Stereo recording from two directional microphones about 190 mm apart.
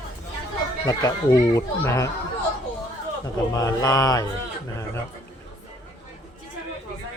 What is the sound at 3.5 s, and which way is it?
Speech, 20° left (ahead or behind).